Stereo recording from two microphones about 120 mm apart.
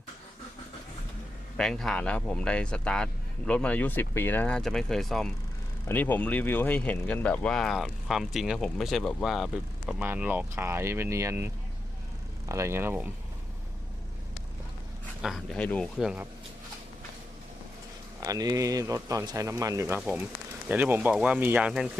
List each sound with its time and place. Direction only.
1.5 s speech: 5° left (ahead or behind)
5.9 s speech: 15° left (ahead or behind); by 10.0 s centre (ahead or behind)
10.0 s speech: 15° right (ahead or behind)
15.5 s speech: 10° left (ahead or behind)
16.0 s speech: 5° right (ahead or behind)
18.2 s speech: 30° right (ahead or behind); by 21.8 s 10° right (ahead or behind)